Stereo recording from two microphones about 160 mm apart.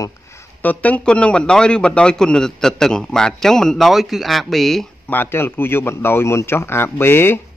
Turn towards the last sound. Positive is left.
turn(degrees=15)  # may be behind; listen again after turning